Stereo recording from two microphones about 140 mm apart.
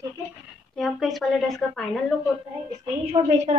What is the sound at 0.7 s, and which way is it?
A woman's voice, centre (ahead or behind).